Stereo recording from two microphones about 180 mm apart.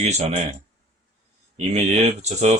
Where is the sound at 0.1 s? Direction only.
35° right (ahead or behind).